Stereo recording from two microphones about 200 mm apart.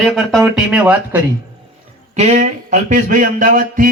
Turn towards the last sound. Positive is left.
turn(degrees=-40)  # may be behind; listen again after turning